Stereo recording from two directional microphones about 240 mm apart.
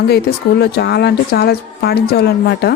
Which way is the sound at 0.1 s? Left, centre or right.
Left.